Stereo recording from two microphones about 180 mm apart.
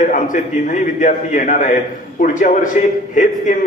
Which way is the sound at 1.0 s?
45° left (ahead or behind).